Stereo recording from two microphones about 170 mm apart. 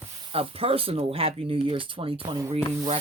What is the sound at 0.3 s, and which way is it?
Speech, 35° right (ahead or behind).